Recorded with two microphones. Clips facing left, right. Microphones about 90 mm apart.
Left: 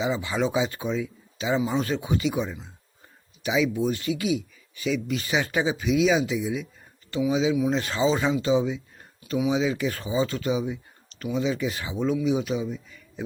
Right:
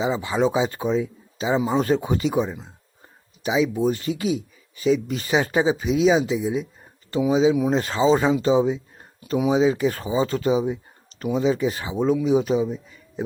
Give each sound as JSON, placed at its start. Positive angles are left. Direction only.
{"t": 0.0, "sound": "speech", "side_deg": -35}
{"t": 7.5, "sound": "speech", "side_deg": -50}
{"t": 7.8, "sound": "speech", "side_deg": -35}